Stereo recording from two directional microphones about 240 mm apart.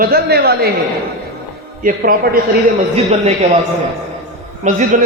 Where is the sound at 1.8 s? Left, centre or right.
Right.